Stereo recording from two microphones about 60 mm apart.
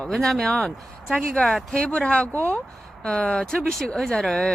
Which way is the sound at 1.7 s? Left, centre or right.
Centre.